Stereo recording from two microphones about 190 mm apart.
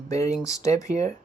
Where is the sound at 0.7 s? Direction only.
40° right (ahead or behind).